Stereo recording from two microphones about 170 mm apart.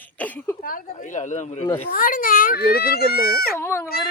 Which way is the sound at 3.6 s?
15° left (ahead or behind).